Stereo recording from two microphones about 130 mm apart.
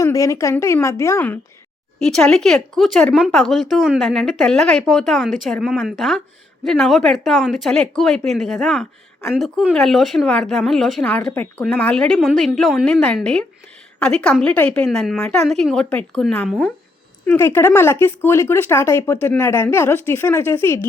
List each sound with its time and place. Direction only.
0.0 s speech: 25° left (ahead or behind)
2.0 s a woman's voice: 5° left (ahead or behind)
17.2 s speech: 20° left (ahead or behind)